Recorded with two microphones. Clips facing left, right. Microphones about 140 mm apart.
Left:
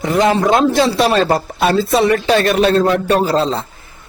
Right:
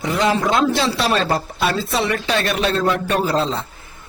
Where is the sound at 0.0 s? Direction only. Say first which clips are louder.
Left 5 dB; 50° left (ahead or behind).